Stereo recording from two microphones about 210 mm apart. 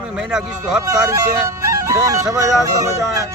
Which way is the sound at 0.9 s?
15° right (ahead or behind).